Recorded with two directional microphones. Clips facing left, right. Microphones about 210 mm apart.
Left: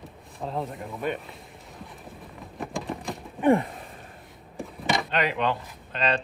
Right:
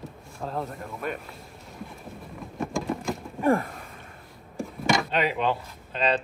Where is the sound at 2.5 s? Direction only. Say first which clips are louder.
Right 4 dB; centre (ahead or behind).